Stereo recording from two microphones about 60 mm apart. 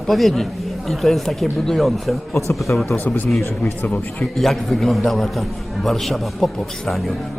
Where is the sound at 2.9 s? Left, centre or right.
Left.